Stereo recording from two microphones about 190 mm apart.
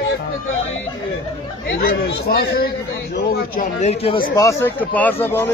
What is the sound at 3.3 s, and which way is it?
Speech, 40° left (ahead or behind).